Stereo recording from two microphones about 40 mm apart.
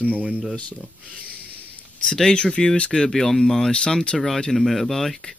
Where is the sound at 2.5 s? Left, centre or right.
Left.